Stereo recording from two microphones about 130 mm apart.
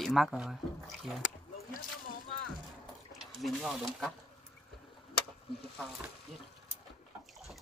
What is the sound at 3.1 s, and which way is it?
Speech, centre (ahead or behind).